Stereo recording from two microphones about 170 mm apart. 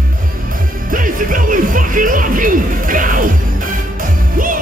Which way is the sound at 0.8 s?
55° right (ahead or behind).